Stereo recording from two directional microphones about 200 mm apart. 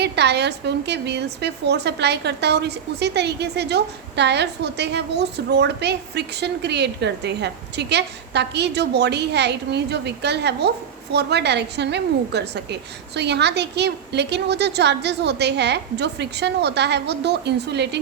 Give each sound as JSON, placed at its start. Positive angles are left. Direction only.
{"t": 0.0, "sound": "a woman's voice", "side_deg": -55}